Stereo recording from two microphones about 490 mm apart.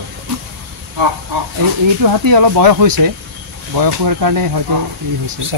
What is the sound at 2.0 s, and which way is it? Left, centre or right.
Speech, right.